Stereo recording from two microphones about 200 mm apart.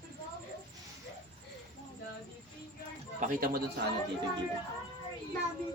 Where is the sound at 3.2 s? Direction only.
45° right (ahead or behind).